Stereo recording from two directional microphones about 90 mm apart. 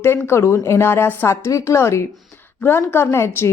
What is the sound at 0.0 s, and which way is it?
Speech, 30° left (ahead or behind).